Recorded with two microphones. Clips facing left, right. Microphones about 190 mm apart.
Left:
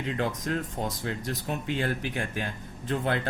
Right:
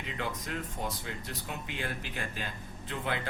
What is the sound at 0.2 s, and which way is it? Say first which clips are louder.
Speech: left 5 dB; 60° left (ahead or behind).